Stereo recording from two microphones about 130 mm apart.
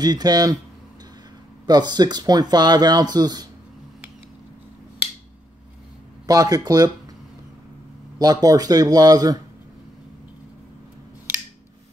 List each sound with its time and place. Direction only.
0.0 s speech: 30° right (ahead or behind)
1.7 s speech: 35° right (ahead or behind)
6.2 s speech: 25° right (ahead or behind)
8.2 s speech: 30° right (ahead or behind)